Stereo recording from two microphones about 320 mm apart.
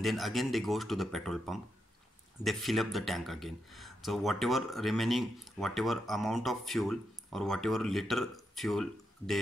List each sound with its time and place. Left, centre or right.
0.0 s speech: centre